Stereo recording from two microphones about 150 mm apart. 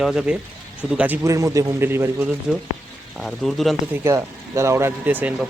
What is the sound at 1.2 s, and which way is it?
Speech, 20° right (ahead or behind).